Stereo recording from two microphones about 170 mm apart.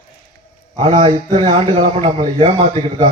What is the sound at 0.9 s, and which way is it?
Speech, 40° right (ahead or behind).